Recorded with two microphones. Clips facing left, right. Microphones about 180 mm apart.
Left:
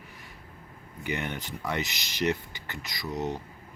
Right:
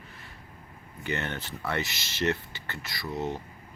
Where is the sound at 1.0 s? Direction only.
15° left (ahead or behind).